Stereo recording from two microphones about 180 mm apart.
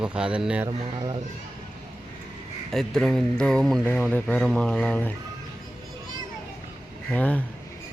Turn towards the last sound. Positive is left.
turn(degrees=10)  # may be behind; listen again after turning